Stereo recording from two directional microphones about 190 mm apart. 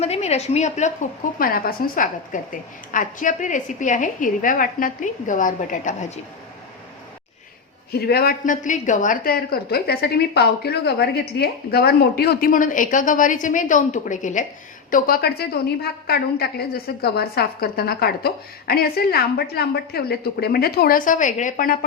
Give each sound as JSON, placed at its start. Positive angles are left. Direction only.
{"t": 0.0, "sound": "a woman's voice", "side_deg": 35}
{"t": 1.4, "sound": "speech", "side_deg": 50}
{"t": 7.9, "sound": "a woman's voice", "side_deg": 55}